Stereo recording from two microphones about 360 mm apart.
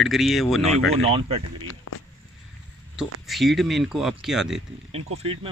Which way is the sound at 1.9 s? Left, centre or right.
Left.